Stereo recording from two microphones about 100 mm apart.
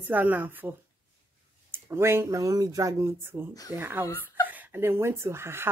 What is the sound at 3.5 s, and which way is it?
Speech, 40° left (ahead or behind).